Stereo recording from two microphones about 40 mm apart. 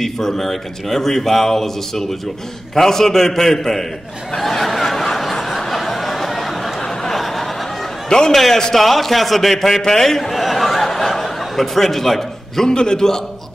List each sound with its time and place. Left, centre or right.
0.0 s speech: centre
4.4 s snicker: centre
6.8 s a sound: centre
8.3 s a man's voice: centre
12.6 s speech: centre